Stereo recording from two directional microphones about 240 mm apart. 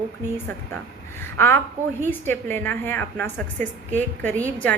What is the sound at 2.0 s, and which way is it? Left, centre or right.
A woman's voice, centre.